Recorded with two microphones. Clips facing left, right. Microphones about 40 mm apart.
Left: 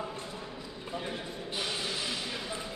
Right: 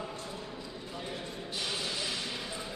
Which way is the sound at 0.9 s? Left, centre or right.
Centre.